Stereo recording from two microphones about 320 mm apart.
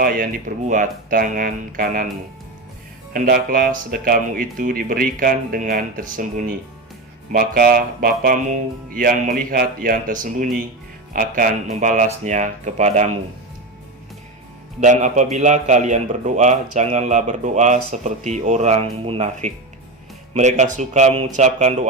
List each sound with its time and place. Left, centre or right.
0.0 s a man's voice: right
3.1 s a man's voice: right
14.8 s a man's voice: right